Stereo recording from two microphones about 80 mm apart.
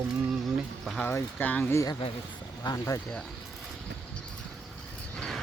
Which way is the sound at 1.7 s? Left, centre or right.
Left.